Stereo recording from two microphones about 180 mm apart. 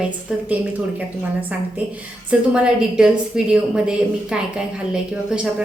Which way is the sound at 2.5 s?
5° right (ahead or behind).